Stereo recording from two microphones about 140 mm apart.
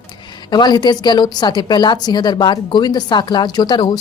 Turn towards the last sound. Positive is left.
turn(degrees=30)  # may be behind; listen again after turning